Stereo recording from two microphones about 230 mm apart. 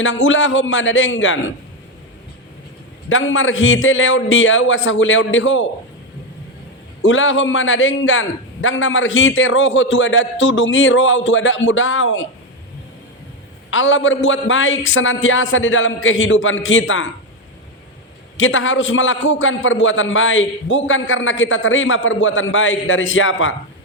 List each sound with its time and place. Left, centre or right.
0.0 s a man's voice: left
3.1 s a man's voice: left
7.0 s a man's voice: left
13.7 s a man's voice: left
18.3 s a man's voice: left